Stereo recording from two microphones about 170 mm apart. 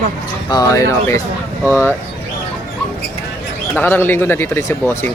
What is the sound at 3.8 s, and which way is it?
Speech, 10° left (ahead or behind).